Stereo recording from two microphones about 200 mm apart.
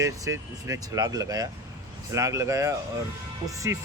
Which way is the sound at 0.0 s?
15° right (ahead or behind).